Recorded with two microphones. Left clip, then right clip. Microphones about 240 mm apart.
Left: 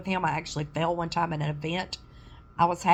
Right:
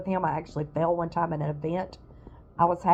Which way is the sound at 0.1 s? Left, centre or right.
Centre.